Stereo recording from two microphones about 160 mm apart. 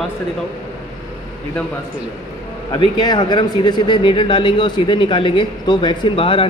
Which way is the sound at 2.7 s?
25° left (ahead or behind).